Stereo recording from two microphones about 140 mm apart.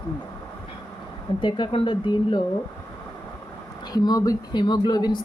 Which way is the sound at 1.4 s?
35° left (ahead or behind).